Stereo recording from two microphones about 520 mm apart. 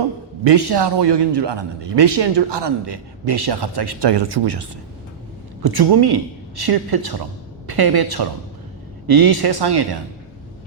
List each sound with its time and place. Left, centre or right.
0.4 s a man's voice: right